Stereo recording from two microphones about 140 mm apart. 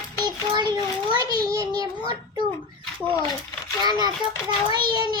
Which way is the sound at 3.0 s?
15° left (ahead or behind).